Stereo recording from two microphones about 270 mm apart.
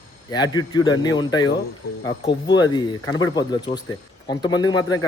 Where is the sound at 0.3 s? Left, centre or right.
Centre.